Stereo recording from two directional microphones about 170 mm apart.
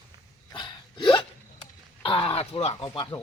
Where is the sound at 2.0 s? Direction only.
30° left (ahead or behind).